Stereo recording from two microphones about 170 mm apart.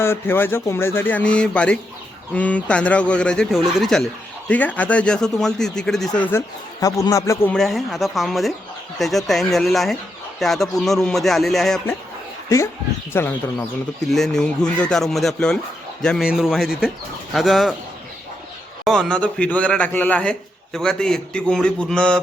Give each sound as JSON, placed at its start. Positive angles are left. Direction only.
{"t": 0.0, "sound": "speech", "side_deg": 15}
{"t": 6.7, "sound": "speech", "side_deg": 20}
{"t": 7.5, "sound": "speech", "side_deg": 0}
{"t": 13.1, "sound": "speech", "side_deg": 15}
{"t": 14.1, "sound": "speech", "side_deg": 5}
{"t": 18.9, "sound": "speech", "side_deg": 5}